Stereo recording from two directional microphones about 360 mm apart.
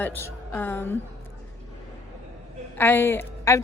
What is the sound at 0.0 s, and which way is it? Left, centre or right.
Speech, centre.